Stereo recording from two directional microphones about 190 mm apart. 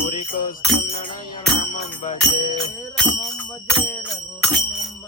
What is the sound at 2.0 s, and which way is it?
Music, 40° left (ahead or behind).